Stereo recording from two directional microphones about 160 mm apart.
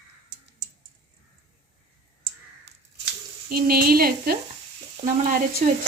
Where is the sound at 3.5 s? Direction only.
65° right (ahead or behind).